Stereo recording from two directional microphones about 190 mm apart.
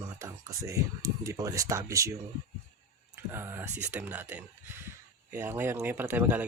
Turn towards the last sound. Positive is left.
turn(degrees=-10)  # may be behind; listen again after turning